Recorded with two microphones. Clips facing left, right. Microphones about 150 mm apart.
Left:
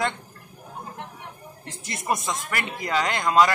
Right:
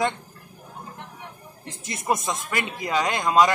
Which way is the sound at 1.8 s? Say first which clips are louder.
Right 2 dB; 20° right (ahead or behind).